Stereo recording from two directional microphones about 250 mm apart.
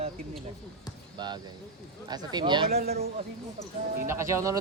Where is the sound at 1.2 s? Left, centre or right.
Centre.